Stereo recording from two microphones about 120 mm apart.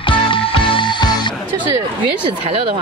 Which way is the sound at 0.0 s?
45° left (ahead or behind).